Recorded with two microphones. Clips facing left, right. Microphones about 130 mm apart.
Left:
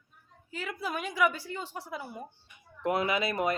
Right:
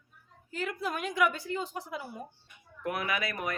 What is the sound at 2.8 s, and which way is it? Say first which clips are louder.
Speech: left 4 dB; 25° left (ahead or behind).